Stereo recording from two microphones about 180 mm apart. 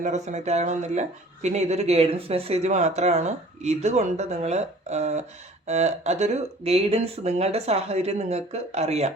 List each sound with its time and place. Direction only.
0.0 s speech: 40° right (ahead or behind)